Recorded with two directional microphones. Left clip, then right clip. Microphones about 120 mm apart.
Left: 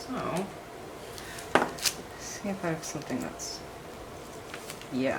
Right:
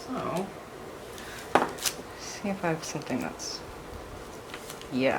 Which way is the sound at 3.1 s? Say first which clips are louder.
Right 2 dB; 30° right (ahead or behind).